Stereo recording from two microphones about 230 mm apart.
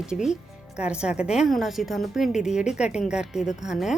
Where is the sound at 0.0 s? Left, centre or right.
Centre.